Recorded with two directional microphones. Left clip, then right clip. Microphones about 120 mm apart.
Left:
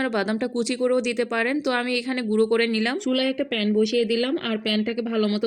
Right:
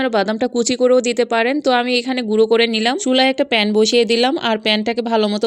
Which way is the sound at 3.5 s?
55° right (ahead or behind).